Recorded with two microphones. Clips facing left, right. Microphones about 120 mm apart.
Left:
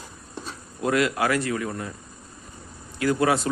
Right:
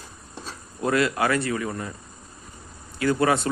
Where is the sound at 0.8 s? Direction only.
Centre (ahead or behind).